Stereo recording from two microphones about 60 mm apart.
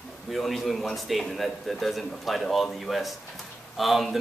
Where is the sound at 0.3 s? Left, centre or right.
Centre.